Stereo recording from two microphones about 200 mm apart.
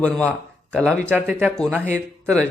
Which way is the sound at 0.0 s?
5° left (ahead or behind).